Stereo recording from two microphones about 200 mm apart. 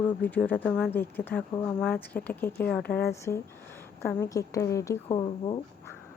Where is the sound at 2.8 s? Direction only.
50° left (ahead or behind).